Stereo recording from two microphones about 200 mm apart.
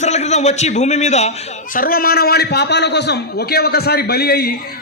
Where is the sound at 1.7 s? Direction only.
45° left (ahead or behind).